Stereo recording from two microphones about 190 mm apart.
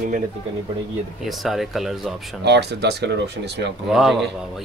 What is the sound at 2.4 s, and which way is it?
Speech, 60° right (ahead or behind).